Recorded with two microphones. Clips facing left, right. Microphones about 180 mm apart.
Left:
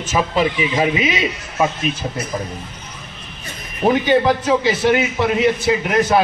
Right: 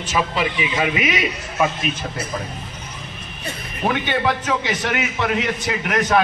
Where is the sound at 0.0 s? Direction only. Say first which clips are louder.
Left 4 dB; 40° left (ahead or behind).